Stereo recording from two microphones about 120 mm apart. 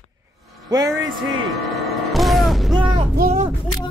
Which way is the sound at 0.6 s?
35° right (ahead or behind).